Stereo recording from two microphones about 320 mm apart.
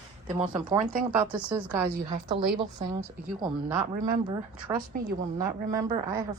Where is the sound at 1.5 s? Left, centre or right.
Centre.